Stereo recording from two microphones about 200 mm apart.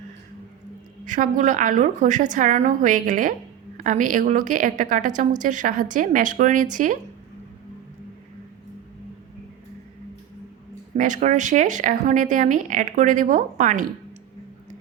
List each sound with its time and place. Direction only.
1.0 s a woman's voice: 40° right (ahead or behind)
10.9 s a woman's voice: 40° right (ahead or behind)